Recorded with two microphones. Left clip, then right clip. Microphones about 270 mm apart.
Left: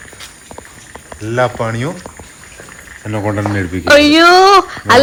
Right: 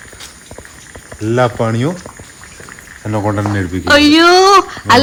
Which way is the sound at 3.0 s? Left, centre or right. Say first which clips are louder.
Right 1 dB; centre.